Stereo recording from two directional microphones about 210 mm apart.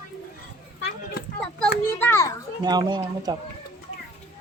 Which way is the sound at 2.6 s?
20° right (ahead or behind).